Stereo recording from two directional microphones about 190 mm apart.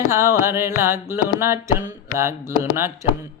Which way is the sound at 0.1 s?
15° right (ahead or behind).